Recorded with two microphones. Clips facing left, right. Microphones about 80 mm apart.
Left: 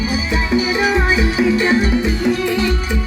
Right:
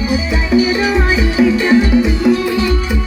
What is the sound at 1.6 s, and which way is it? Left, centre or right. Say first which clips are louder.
Music: right 4 dB; centre.